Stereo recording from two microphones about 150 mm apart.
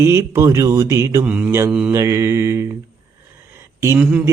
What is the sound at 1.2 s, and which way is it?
Speech, 10° right (ahead or behind).